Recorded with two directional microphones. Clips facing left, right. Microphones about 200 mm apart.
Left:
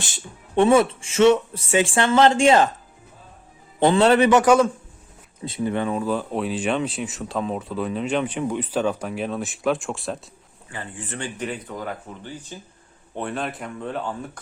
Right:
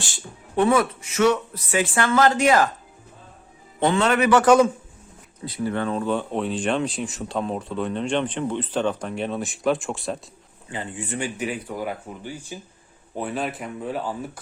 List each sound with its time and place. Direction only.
0.0 s speech: 25° left (ahead or behind)
3.8 s a man's voice: 35° left (ahead or behind)
5.5 s speech: 20° left (ahead or behind); by 10.2 s centre (ahead or behind)
10.7 s speech: 15° right (ahead or behind)